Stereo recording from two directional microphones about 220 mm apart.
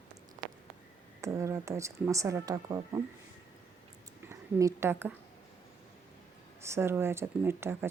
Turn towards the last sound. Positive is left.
turn(degrees=-10)  # may be behind; listen again after turning